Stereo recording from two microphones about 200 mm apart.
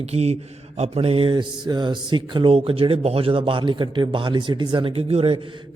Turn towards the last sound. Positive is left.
turn(degrees=-30)  # may be behind; listen again after turning